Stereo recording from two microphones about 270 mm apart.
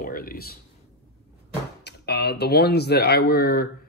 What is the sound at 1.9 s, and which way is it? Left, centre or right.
Speech, left.